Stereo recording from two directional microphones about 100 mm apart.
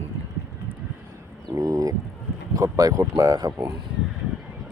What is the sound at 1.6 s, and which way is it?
Speech, 35° right (ahead or behind).